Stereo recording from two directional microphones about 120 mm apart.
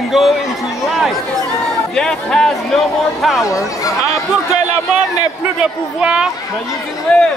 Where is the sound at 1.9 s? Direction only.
5° left (ahead or behind).